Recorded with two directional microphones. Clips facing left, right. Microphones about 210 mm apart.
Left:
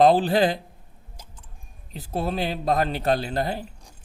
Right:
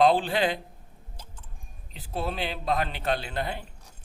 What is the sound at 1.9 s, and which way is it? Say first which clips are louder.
A man's voice: left 5 dB; 40° left (ahead or behind).